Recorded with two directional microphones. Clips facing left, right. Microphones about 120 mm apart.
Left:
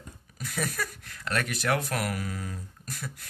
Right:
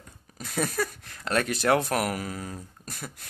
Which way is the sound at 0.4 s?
30° right (ahead or behind).